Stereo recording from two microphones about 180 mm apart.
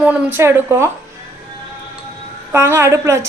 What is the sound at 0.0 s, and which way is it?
Speech, 10° right (ahead or behind).